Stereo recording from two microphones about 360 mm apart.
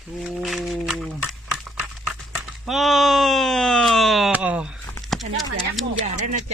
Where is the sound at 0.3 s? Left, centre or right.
Centre.